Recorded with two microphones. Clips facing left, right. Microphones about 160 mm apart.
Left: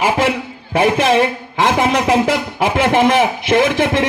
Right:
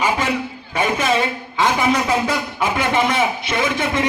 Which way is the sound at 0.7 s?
75° left (ahead or behind).